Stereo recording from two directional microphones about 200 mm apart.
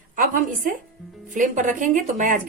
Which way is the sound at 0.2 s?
45° right (ahead or behind).